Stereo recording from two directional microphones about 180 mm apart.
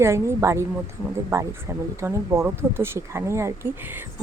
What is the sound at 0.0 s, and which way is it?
Speech, 15° right (ahead or behind).